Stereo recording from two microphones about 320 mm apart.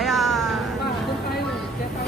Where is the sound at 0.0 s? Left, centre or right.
Centre.